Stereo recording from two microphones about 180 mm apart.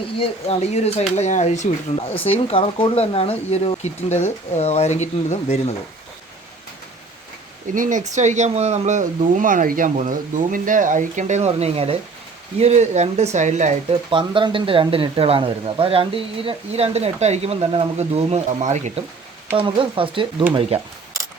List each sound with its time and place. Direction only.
0.2 s speech: 35° left (ahead or behind)
7.7 s speech: 45° right (ahead or behind)
14.1 s speech: 25° right (ahead or behind)
19.5 s speech: 30° right (ahead or behind)